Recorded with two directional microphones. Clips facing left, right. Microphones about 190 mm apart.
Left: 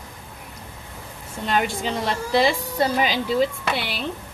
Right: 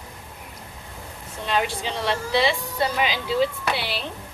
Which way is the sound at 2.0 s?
45° left (ahead or behind).